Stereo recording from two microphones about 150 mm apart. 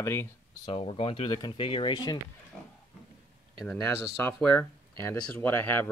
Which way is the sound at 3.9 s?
15° left (ahead or behind).